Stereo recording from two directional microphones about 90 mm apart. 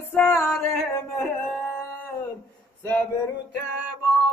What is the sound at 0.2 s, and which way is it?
Music, 30° left (ahead or behind).